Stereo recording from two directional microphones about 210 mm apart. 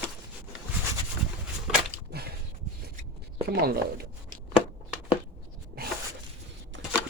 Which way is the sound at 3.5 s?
45° right (ahead or behind).